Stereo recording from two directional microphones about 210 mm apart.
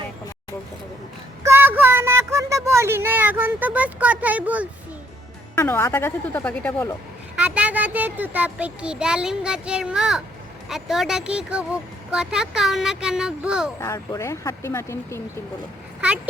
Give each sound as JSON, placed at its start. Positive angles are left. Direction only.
{"t": 1.5, "sound": "speech", "side_deg": -10}
{"t": 5.5, "sound": "speech", "side_deg": 10}
{"t": 7.3, "sound": "a child's voice", "side_deg": -5}
{"t": 13.7, "sound": "speech", "side_deg": 15}
{"t": 16.0, "sound": "speech", "side_deg": -5}